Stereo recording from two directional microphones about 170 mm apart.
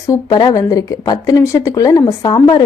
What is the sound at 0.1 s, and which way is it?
Speech, 25° left (ahead or behind).